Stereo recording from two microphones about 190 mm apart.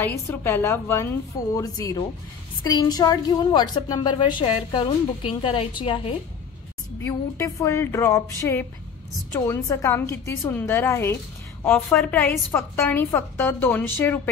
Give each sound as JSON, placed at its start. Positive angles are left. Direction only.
{"t": 0.3, "sound": "a woman's voice", "side_deg": 10}
{"t": 7.1, "sound": "a woman's voice", "side_deg": 15}